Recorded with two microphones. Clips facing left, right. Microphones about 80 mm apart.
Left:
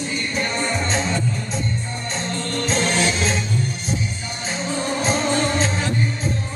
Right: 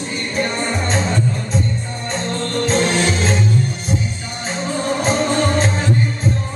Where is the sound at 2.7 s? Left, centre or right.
Right.